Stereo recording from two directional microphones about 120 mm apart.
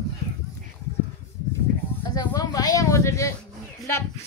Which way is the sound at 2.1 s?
30° left (ahead or behind).